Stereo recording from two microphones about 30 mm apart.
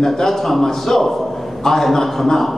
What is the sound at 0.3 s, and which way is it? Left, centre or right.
A man's voice, centre.